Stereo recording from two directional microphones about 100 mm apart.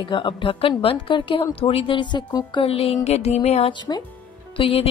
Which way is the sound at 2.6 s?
70° left (ahead or behind).